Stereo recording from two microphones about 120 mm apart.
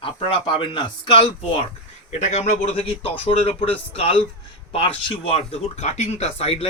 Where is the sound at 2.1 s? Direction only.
70° left (ahead or behind).